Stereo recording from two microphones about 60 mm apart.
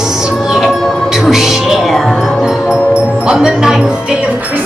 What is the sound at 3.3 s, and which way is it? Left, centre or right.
Music, centre.